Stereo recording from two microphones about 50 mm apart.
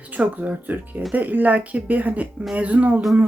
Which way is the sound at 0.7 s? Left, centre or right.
Right.